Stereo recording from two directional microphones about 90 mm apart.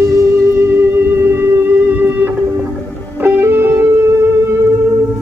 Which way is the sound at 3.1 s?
20° right (ahead or behind).